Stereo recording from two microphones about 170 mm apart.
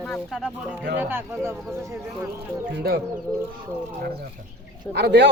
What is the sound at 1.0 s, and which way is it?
Speech, 10° right (ahead or behind).